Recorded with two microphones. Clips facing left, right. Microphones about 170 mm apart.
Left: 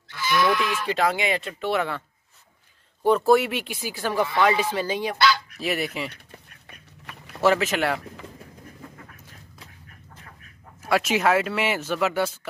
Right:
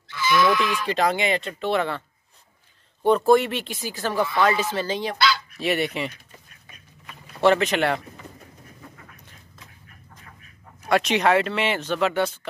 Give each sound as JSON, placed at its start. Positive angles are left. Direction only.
{"t": 0.1, "sound": "goat", "side_deg": 50}
{"t": 0.8, "sound": "speech", "side_deg": 5}
{"t": 5.6, "sound": "fowl", "side_deg": 0}
{"t": 7.4, "sound": "fowl", "side_deg": 5}
{"t": 10.8, "sound": "speech", "side_deg": 5}